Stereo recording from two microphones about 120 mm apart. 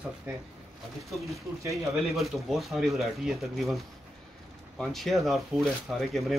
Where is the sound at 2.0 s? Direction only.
Centre (ahead or behind).